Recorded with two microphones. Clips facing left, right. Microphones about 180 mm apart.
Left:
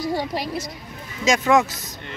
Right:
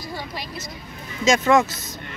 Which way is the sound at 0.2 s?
70° left (ahead or behind).